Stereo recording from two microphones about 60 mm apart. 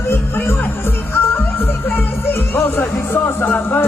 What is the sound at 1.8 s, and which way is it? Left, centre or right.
Music, left.